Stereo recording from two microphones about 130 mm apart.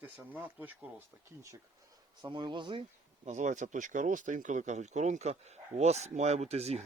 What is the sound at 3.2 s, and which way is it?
Speech, 70° right (ahead or behind).